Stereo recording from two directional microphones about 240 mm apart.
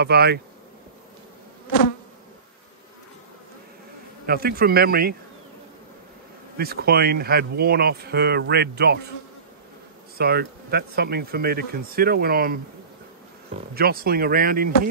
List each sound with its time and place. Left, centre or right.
0.0 s speech: right
4.3 s speech: right
6.6 s speech: right
10.1 s speech: right
13.7 s speech: right